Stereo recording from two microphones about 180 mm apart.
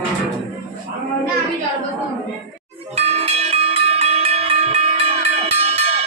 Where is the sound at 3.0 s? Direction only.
35° right (ahead or behind).